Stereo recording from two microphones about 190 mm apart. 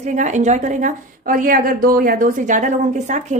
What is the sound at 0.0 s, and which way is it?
A woman's voice, 40° right (ahead or behind).